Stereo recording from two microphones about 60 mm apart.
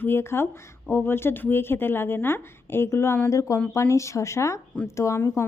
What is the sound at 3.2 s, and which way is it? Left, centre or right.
A woman's voice, left.